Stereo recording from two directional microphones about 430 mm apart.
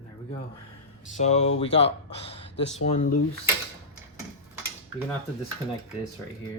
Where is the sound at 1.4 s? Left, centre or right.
Left.